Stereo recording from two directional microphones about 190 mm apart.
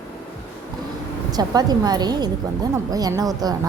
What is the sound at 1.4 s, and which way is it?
A woman's voice, 20° right (ahead or behind).